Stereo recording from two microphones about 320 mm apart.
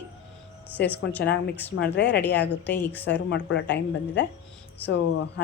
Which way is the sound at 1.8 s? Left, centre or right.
Left.